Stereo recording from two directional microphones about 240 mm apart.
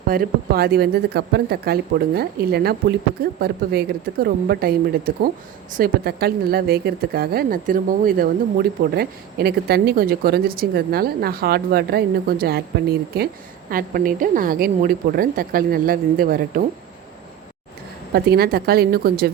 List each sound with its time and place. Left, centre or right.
0.1 s speech: right
18.1 s speech: right